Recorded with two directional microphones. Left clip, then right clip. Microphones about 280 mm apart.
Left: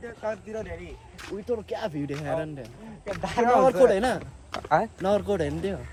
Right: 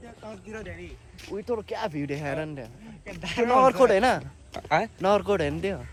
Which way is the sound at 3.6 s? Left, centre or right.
Centre.